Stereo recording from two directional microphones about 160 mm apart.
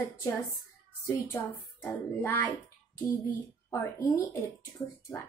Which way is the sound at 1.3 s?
10° left (ahead or behind).